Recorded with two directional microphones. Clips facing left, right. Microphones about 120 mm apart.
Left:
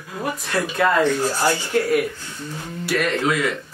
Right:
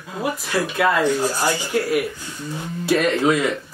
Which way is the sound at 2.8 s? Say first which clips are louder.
Right 4 dB; 25° right (ahead or behind).